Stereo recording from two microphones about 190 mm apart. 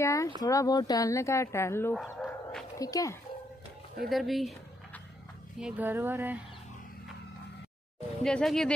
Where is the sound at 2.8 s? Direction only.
20° left (ahead or behind).